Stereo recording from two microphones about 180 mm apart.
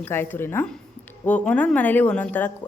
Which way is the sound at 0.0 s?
10° left (ahead or behind).